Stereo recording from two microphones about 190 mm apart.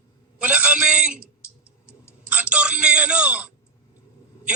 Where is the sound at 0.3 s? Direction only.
5° right (ahead or behind).